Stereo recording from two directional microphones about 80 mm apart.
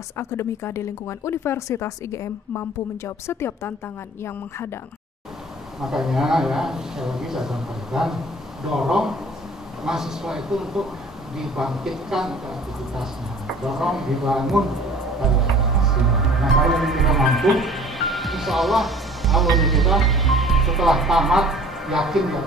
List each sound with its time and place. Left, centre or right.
0.2 s speech: left
5.8 s a man's voice: centre
13.6 s speech: centre